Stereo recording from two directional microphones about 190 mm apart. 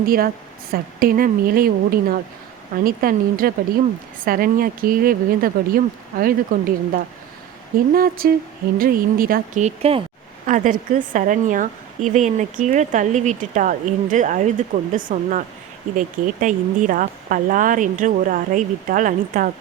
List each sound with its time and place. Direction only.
0.0 s a woman's voice: 50° right (ahead or behind)